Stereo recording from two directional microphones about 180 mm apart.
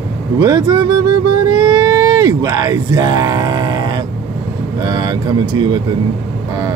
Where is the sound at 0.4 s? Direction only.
20° right (ahead or behind).